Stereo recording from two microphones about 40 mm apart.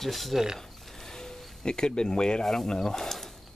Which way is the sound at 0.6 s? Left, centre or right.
Centre.